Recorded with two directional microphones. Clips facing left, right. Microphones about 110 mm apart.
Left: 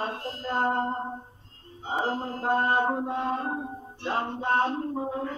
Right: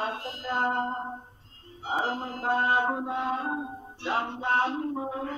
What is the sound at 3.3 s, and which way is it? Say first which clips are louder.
Music: even; 5° right (ahead or behind).